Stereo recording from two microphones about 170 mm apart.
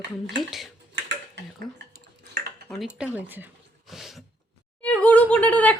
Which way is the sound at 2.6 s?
Centre (ahead or behind).